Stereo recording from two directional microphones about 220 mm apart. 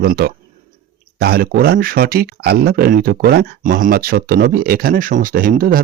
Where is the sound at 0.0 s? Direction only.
45° right (ahead or behind).